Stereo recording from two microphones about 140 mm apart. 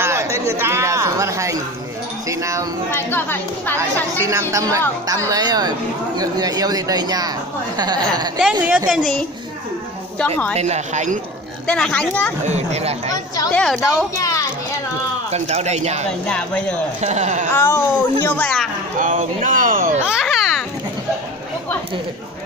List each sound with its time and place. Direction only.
0.0 s speech: 20° right (ahead or behind)
2.9 s speech: 15° left (ahead or behind)
3.7 s speech: 20° right (ahead or behind)
8.6 s a woman's voice: 5° right (ahead or behind)
10.1 s speech: 10° left (ahead or behind)
10.6 s speech: 55° right (ahead or behind)
11.6 s speech: 5° left (ahead or behind)
12.4 s speech: 50° right (ahead or behind)
13.5 s a woman's voice: centre (ahead or behind)
14.1 s children playing: 25° left (ahead or behind)
15.3 s speech: 50° right (ahead or behind)
17.6 s speech: 15° left (ahead or behind)
18.9 s speech: 70° right (ahead or behind)
20.1 s children playing: centre (ahead or behind)